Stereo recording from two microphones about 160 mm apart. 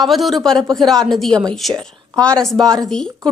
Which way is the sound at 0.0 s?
Centre (ahead or behind).